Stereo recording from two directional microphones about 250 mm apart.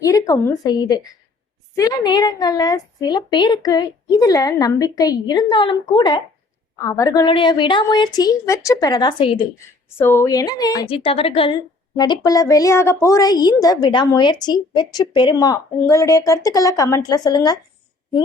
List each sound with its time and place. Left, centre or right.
0.0 s a woman's voice: centre